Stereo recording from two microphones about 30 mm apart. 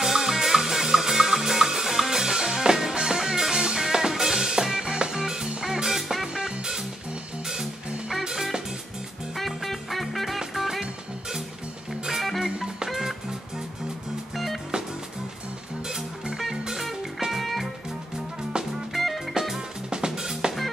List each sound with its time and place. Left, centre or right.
0.0 s music: centre
6.2 s music: right
8.2 s music: centre
9.4 s music: centre
12.2 s music: centre
12.4 s music: right
14.3 s music: centre
17.3 s music: centre
18.9 s music: centre
19.5 s music: right